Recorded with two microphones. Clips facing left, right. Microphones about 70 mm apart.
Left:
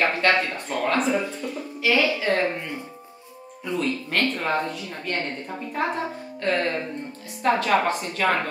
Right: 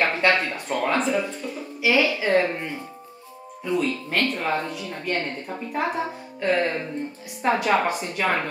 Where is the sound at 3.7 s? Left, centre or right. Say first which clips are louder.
Right 1 dB; centre.